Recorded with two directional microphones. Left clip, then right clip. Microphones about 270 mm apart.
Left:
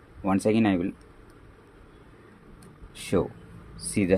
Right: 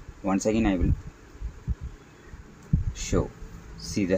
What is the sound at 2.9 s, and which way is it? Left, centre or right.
Heart sounds, centre.